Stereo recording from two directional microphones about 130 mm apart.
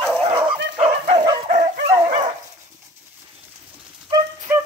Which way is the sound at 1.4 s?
70° right (ahead or behind).